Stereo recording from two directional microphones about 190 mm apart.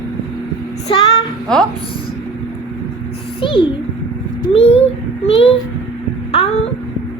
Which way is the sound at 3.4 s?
25° left (ahead or behind).